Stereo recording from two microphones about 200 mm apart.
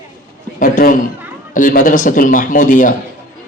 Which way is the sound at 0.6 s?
45° left (ahead or behind).